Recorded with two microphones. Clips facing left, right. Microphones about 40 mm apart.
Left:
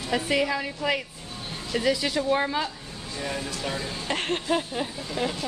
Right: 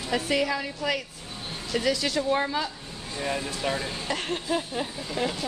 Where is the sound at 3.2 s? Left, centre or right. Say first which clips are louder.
Right 2 dB; centre.